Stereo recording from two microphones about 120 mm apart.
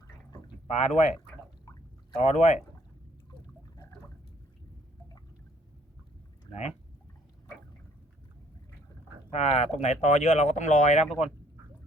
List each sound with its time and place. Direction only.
0.3 s pour: 40° left (ahead or behind)
0.7 s speech: 70° left (ahead or behind)
2.1 s speech: 65° left (ahead or behind)
6.5 s speech: 65° left (ahead or behind)
9.3 s speech: 65° left (ahead or behind)